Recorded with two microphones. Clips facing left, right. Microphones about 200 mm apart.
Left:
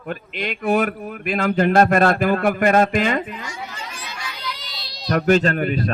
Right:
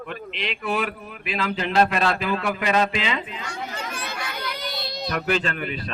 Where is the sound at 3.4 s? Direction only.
60° right (ahead or behind).